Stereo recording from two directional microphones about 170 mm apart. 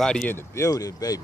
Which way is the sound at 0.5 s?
20° left (ahead or behind).